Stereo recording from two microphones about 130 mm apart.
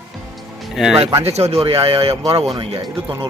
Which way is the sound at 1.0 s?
50° right (ahead or behind).